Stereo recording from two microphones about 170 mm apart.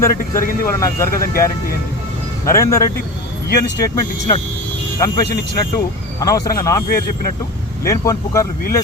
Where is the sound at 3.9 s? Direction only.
20° left (ahead or behind).